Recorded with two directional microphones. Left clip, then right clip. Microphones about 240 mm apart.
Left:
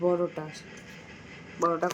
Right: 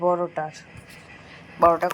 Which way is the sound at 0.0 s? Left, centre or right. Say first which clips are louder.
Right 4 dB; centre.